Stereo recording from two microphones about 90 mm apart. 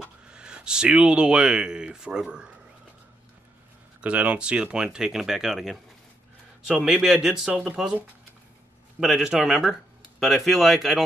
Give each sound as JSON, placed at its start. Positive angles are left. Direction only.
{"t": 0.0, "sound": "speech", "side_deg": -10}
{"t": 4.0, "sound": "speech", "side_deg": -15}
{"t": 6.8, "sound": "speech", "side_deg": -5}
{"t": 9.0, "sound": "a man's voice", "side_deg": -5}